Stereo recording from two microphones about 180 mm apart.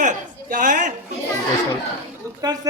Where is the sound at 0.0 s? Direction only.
45° right (ahead or behind).